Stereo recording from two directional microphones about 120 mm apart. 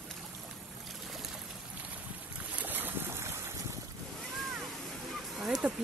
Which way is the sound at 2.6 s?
15° right (ahead or behind).